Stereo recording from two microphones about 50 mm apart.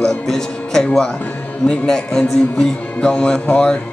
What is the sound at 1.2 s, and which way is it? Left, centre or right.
Music, left.